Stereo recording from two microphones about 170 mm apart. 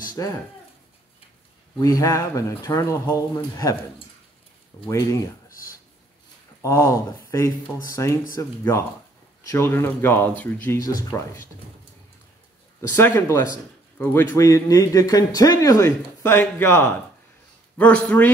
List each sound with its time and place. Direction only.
0.0 s a sound: 20° left (ahead or behind)
1.8 s a man's voice: 20° left (ahead or behind)
4.8 s speech: 20° left (ahead or behind)
5.5 s a sound: 55° left (ahead or behind)
6.6 s speech: 15° left (ahead or behind)
12.9 s a man's voice: 15° left (ahead or behind)